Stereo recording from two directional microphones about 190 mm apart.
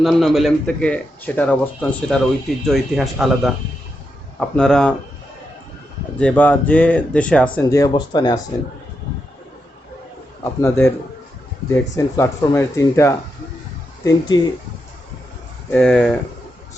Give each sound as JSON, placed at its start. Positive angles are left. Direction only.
{"t": 0.0, "sound": "a man's voice", "side_deg": 0}
{"t": 6.1, "sound": "speech", "side_deg": 5}
{"t": 7.7, "sound": "speech", "side_deg": 20}
{"t": 10.4, "sound": "speech", "side_deg": 15}
{"t": 15.7, "sound": "a man's voice", "side_deg": 5}